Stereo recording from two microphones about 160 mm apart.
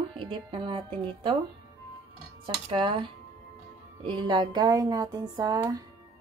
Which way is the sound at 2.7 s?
35° right (ahead or behind).